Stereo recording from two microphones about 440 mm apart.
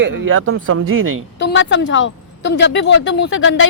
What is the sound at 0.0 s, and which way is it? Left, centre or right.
Speech, right.